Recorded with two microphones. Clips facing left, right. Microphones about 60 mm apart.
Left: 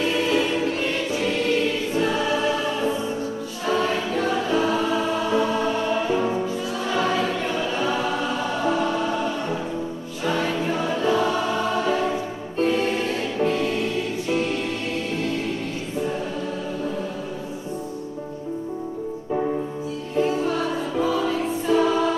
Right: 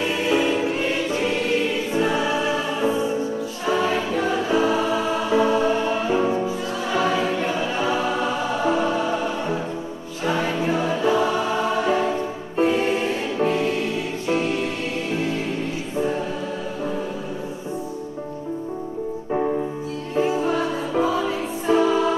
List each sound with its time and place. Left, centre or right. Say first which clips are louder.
0.0 s music: right 1 dB; centre
3.6 s choir: right 1 dB; centre
12.5 s music: right 2 dB; centre
20.2 s music: right 1 dB; centre
21.8 s music: right 1 dB; centre